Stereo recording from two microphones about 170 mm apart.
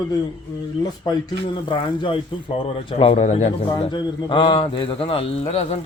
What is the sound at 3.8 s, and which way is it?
Speech, 30° left (ahead or behind).